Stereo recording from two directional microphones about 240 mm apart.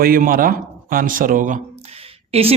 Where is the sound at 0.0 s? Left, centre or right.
Right.